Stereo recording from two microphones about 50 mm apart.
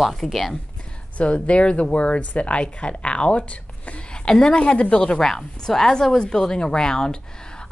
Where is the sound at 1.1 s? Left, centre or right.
Left.